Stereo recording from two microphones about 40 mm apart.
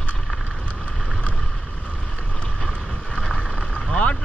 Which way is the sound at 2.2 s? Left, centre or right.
Left.